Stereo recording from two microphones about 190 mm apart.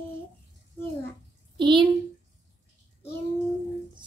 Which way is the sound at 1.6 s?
25° right (ahead or behind).